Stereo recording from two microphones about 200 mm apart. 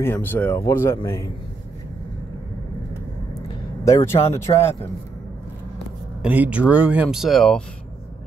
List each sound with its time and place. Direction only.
0.0 s speech: 10° left (ahead or behind)
3.8 s speech: 15° left (ahead or behind)
6.2 s speech: 5° right (ahead or behind)